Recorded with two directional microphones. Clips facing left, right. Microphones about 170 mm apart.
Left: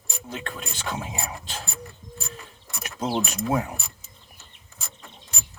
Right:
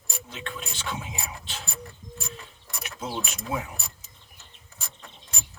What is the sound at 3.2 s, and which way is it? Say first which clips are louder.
Speech: left 7 dB; 45° left (ahead or behind).